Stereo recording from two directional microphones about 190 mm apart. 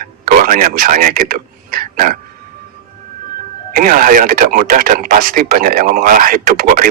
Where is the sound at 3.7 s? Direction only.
45° right (ahead or behind).